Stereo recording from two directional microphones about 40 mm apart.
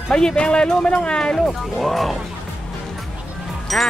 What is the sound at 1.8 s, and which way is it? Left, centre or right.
Speech, centre.